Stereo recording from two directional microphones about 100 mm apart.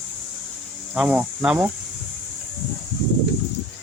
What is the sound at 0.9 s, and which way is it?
Speech, 15° right (ahead or behind).